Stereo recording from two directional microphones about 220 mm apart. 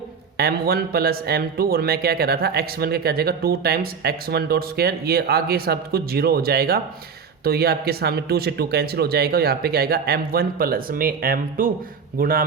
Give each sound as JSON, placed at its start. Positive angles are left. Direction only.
{"t": 0.3, "sound": "a man's voice", "side_deg": -45}